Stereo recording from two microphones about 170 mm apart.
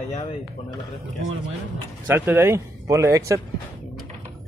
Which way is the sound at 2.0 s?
10° right (ahead or behind).